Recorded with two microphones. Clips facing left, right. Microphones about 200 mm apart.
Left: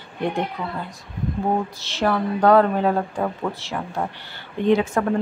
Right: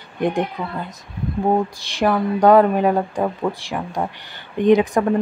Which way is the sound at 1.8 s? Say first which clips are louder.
Right 3 dB; 15° right (ahead or behind).